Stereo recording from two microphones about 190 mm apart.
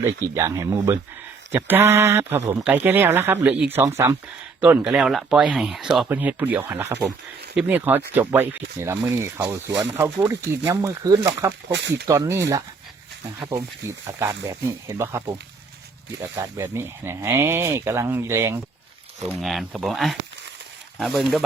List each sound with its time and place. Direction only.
0.3 s speech: 15° right (ahead or behind)
11.7 s speech: 65° right (ahead or behind)
12.0 s speech: 20° right (ahead or behind)
16.3 s speech: 15° right (ahead or behind)
19.3 s speech: centre (ahead or behind)